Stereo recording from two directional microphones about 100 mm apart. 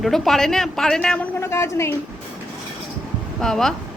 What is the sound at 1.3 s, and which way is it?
Speech, 30° left (ahead or behind).